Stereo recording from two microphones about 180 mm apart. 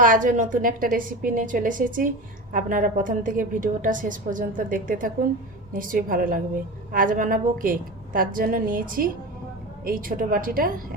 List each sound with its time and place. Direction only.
0.0 s a woman's voice: 45° right (ahead or behind)